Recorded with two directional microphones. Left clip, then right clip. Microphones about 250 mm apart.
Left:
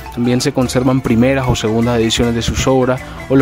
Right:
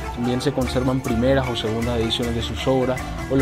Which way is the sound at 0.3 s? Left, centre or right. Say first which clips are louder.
Left 7 dB; left.